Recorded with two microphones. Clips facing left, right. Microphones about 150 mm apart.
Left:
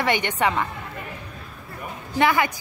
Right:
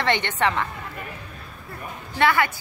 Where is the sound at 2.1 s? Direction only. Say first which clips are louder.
Left 1 dB; 15° left (ahead or behind).